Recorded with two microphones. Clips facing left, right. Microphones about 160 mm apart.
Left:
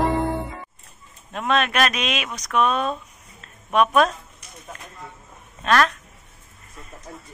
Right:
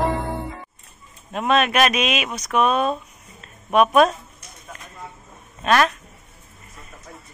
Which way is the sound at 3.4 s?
10° right (ahead or behind).